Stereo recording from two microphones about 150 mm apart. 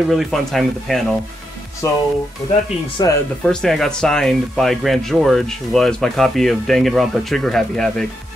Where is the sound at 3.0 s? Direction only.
30° left (ahead or behind).